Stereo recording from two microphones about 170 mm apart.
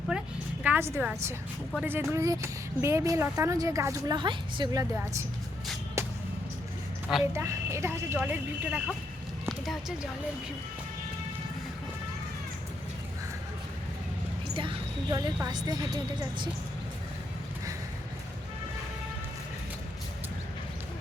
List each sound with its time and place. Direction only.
0.1 s a woman's voice: 5° right (ahead or behind); by 4.9 s 25° right (ahead or behind)
6.0 s music: 15° right (ahead or behind)
7.3 s speech: 15° right (ahead or behind); by 10.1 s centre (ahead or behind)
14.5 s a sound: 30° right (ahead or behind)
15.4 s speech: 20° right (ahead or behind)